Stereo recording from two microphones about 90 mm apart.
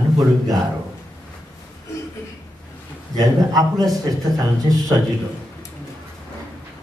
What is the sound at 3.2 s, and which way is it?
Speech, 45° right (ahead or behind).